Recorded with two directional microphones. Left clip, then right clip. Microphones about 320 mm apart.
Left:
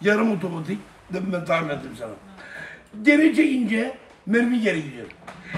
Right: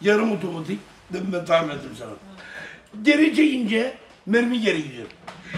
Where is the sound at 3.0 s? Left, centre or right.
Centre.